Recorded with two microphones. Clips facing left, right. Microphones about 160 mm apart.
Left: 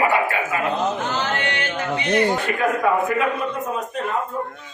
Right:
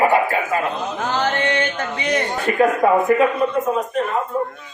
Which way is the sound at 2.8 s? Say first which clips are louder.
Right 4 dB; 40° right (ahead or behind).